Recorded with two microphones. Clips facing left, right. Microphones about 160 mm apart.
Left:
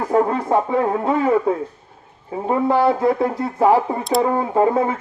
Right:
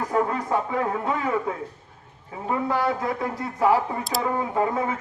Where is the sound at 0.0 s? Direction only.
30° left (ahead or behind).